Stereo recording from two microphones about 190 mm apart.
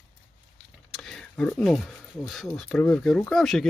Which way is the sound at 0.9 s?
Centre (ahead or behind).